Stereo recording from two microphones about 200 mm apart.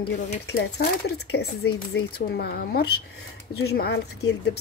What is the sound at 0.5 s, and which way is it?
Speech, 55° left (ahead or behind).